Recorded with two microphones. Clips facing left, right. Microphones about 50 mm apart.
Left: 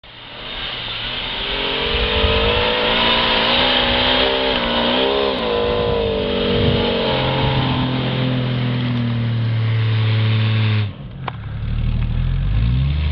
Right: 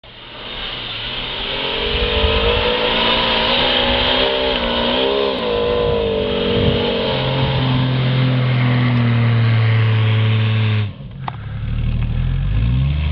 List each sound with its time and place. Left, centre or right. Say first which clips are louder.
1.5 s vehicle: even; centre
8.5 s vehicle: right 4 dB; right
8.9 s vehicle: right 4 dB; right
10.1 s vehicle: right 1 dB; centre